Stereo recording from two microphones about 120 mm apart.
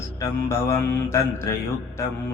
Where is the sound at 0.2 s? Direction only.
25° left (ahead or behind).